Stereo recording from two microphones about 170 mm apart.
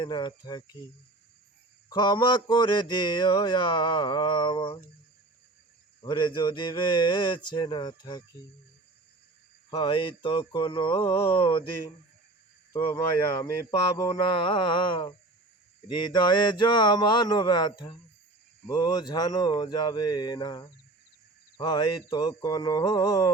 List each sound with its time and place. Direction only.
0.0 s mantra: 25° left (ahead or behind)
1.9 s mantra: 25° left (ahead or behind)
6.0 s mantra: 25° left (ahead or behind)
9.6 s mantra: 25° left (ahead or behind)
11.3 s a sound: 30° left (ahead or behind)
12.7 s mantra: 20° left (ahead or behind)